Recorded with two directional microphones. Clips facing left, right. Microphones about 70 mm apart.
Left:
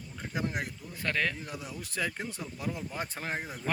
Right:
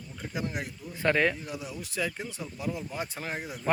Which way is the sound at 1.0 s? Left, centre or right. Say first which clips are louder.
Right 6 dB; right.